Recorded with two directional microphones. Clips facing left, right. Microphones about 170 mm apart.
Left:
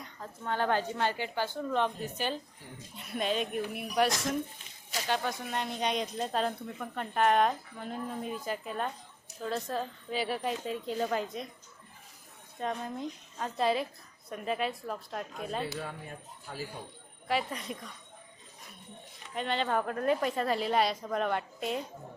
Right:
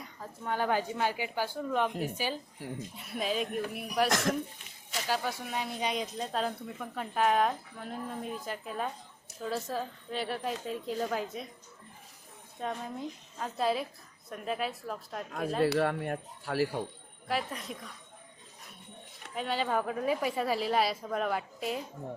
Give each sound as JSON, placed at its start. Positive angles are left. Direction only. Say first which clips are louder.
{"t": 0.0, "sound": "speech", "louder": "even", "side_deg": -5}
{"t": 4.1, "sound": "speech", "louder": "right 4 dB", "side_deg": -90}
{"t": 5.0, "sound": "speech", "louder": "left 1 dB", "side_deg": -5}
{"t": 12.5, "sound": "speech", "louder": "left 1 dB", "side_deg": 0}
{"t": 15.6, "sound": "speech", "louder": "right 11 dB", "side_deg": -70}
{"t": 17.2, "sound": "speech", "louder": "left 2 dB", "side_deg": 0}
{"t": 19.3, "sound": "speech", "louder": "even", "side_deg": -5}